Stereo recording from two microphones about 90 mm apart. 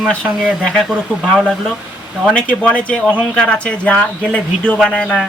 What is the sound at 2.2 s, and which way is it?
Speech, 10° left (ahead or behind).